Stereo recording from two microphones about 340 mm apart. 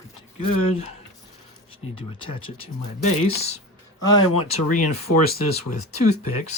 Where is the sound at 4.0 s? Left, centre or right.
Centre.